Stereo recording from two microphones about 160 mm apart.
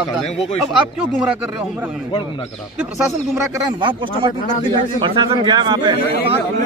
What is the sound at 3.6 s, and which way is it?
Speech, 30° right (ahead or behind).